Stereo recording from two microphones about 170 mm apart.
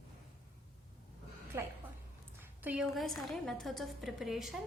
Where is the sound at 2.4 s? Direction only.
10° right (ahead or behind).